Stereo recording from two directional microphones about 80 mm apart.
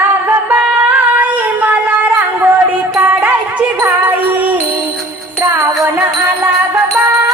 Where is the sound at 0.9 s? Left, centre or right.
Right.